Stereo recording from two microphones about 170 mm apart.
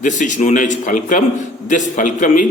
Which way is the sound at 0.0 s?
45° left (ahead or behind).